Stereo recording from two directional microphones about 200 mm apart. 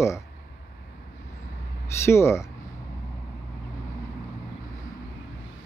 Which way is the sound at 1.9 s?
15° left (ahead or behind).